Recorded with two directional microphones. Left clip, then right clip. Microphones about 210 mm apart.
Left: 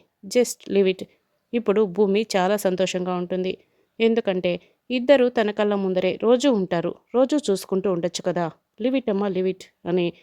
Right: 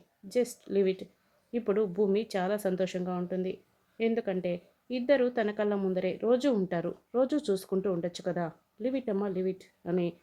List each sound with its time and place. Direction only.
0.3 s a woman's voice: 40° left (ahead or behind)